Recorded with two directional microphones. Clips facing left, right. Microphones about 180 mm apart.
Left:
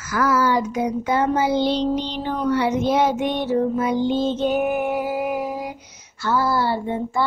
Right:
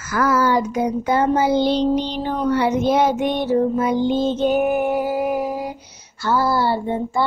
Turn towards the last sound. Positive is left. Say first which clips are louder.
# right 2 dB
turn(degrees=-30)  # may be behind; listen again after turning